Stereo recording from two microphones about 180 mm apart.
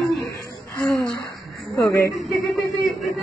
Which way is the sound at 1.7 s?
15° left (ahead or behind).